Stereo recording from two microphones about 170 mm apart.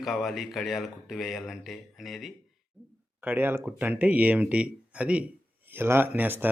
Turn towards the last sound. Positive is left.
turn(degrees=-10)  # may be behind; listen again after turning